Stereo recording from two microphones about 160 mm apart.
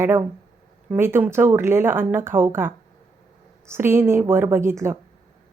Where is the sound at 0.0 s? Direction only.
15° right (ahead or behind).